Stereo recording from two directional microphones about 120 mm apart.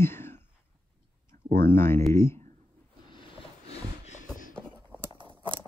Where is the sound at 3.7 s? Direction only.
75° left (ahead or behind).